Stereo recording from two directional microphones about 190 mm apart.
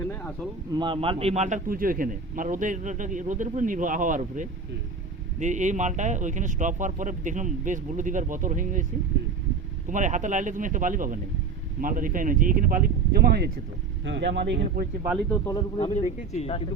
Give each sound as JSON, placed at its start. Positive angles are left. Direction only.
{"t": 0.0, "sound": "speech", "side_deg": 10}
{"t": 0.7, "sound": "a man's voice", "side_deg": -25}
{"t": 9.9, "sound": "a man's voice", "side_deg": -40}
{"t": 14.0, "sound": "speech", "side_deg": -70}
{"t": 15.3, "sound": "speech", "side_deg": 15}
{"t": 16.0, "sound": "speech", "side_deg": 35}